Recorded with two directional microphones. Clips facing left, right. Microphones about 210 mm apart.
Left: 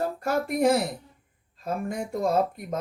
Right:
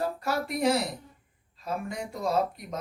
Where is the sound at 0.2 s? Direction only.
50° left (ahead or behind).